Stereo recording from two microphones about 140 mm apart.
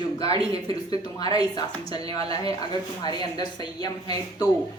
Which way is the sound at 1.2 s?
30° left (ahead or behind).